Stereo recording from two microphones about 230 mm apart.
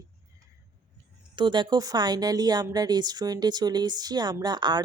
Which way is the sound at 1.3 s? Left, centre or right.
Centre.